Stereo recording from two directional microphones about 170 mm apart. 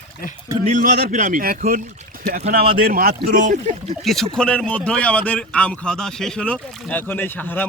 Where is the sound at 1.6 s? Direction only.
40° right (ahead or behind).